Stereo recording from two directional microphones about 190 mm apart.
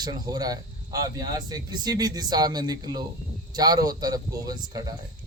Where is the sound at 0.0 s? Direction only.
20° right (ahead or behind).